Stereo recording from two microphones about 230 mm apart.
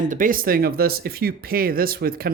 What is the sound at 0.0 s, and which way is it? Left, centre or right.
Speech, right.